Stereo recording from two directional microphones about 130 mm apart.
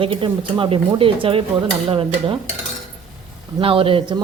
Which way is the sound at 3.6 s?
45° right (ahead or behind).